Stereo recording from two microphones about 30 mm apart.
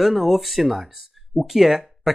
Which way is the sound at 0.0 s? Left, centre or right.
Centre.